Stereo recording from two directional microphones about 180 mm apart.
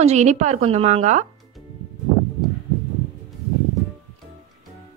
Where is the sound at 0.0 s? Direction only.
40° right (ahead or behind).